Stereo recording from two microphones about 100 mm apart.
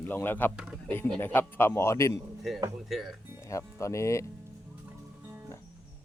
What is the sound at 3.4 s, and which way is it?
Speech, 30° left (ahead or behind).